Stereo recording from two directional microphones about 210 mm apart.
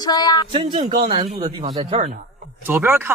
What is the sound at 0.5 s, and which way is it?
Speech, 30° right (ahead or behind).